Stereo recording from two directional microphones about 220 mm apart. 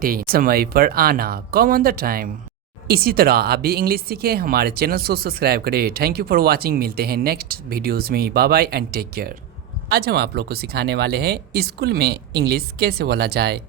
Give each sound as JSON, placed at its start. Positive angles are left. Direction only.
{"t": 0.0, "sound": "speech", "side_deg": -40}